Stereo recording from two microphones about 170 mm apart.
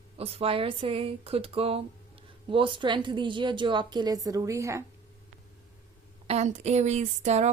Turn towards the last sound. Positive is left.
turn(degrees=-40)  # may be behind; listen again after turning